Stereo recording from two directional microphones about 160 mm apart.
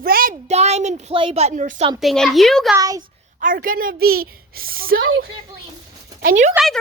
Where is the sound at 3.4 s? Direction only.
60° right (ahead or behind).